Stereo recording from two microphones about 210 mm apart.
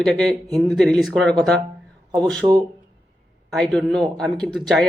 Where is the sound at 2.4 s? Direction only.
20° right (ahead or behind).